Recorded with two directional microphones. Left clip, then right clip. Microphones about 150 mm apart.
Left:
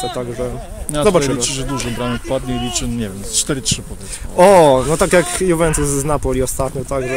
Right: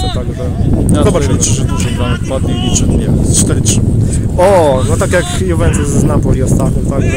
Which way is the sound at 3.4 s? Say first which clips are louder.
Right 5 dB; 20° right (ahead or behind).